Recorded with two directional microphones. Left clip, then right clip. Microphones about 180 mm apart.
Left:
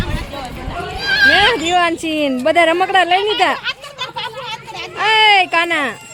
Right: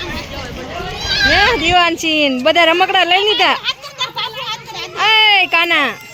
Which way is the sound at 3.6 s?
10° left (ahead or behind).